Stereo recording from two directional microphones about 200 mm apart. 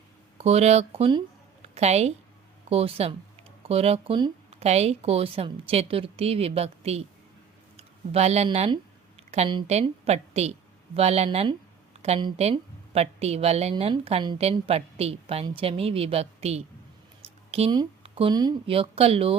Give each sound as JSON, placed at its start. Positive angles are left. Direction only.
{"t": 0.3, "sound": "a woman's voice", "side_deg": -30}